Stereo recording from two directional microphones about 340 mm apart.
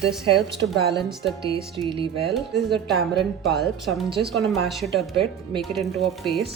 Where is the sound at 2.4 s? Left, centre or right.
Centre.